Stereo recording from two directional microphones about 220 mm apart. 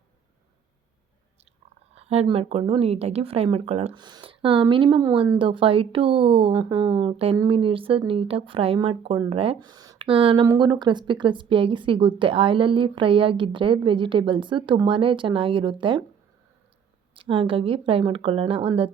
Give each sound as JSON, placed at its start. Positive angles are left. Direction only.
{"t": 2.0, "sound": "speech", "side_deg": -30}
{"t": 17.2, "sound": "speech", "side_deg": -25}